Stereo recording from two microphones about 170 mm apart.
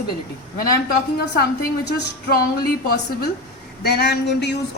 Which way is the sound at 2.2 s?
60° left (ahead or behind).